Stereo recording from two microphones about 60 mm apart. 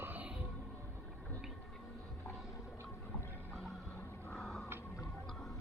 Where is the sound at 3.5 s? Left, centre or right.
Centre.